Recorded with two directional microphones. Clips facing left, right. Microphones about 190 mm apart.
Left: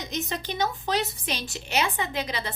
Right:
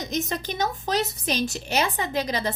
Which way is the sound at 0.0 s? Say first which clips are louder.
Right 3 dB; 45° right (ahead or behind).